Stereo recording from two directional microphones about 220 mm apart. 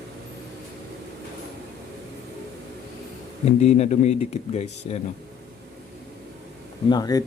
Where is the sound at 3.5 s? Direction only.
30° left (ahead or behind).